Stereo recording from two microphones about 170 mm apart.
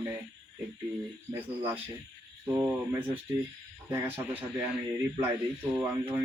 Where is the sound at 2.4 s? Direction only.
15° right (ahead or behind).